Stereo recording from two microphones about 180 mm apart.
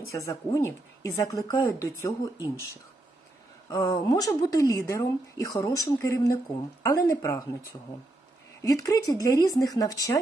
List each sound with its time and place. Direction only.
0.1 s speech: 20° left (ahead or behind)
3.7 s speech: 20° left (ahead or behind)
8.6 s speech: 20° left (ahead or behind)